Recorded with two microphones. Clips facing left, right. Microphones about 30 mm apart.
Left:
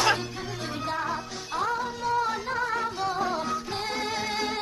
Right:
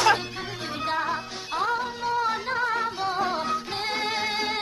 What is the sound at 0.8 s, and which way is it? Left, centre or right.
Music, right.